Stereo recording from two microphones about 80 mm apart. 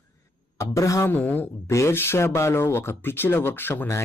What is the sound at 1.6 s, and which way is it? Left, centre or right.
Speech, left.